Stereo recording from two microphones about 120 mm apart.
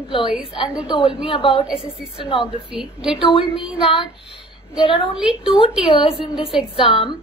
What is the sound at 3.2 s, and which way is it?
Speech, 40° left (ahead or behind).